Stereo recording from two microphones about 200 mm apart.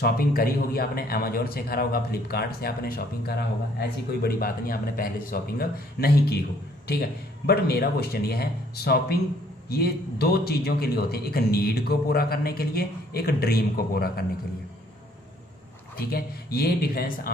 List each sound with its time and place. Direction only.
0.0 s a man's voice: 50° left (ahead or behind)
16.0 s a man's voice: 50° left (ahead or behind)